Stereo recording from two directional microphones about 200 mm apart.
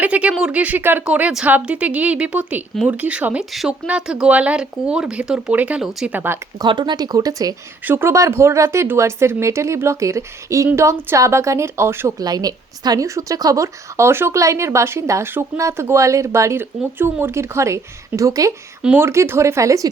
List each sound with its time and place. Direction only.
0.0 s a woman's voice: 5° right (ahead or behind)
6.7 s a woman's voice: 20° right (ahead or behind)